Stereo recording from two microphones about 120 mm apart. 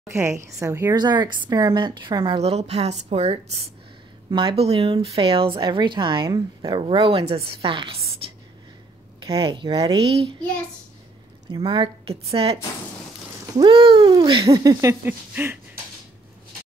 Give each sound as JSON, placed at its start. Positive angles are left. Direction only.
{"t": 0.1, "sound": "speech", "side_deg": -20}
{"t": 0.9, "sound": "a woman's voice", "side_deg": -35}
{"t": 2.3, "sound": "a woman's voice", "side_deg": -60}
{"t": 4.3, "sound": "speech", "side_deg": -45}
{"t": 6.2, "sound": "a woman's voice", "side_deg": -30}
{"t": 6.9, "sound": "speech", "side_deg": -50}
{"t": 8.2, "sound": "whispering", "side_deg": -50}
{"t": 9.2, "sound": "a woman's voice", "side_deg": -45}
{"t": 9.9, "sound": "speech", "side_deg": -55}
{"t": 11.6, "sound": "speech", "side_deg": -45}
{"t": 13.6, "sound": "speech", "side_deg": -45}
{"t": 14.5, "sound": "speech", "side_deg": -30}
{"t": 15.3, "sound": "a sound", "side_deg": -15}